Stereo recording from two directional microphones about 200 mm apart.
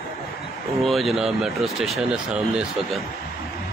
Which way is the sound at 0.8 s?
Centre (ahead or behind).